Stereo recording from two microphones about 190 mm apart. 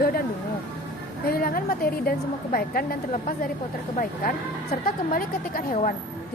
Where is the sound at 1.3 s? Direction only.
50° left (ahead or behind).